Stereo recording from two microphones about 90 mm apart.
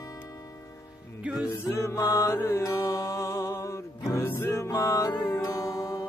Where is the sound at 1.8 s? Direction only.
35° left (ahead or behind).